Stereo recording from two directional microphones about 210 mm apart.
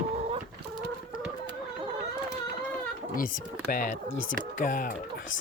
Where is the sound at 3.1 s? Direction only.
40° left (ahead or behind).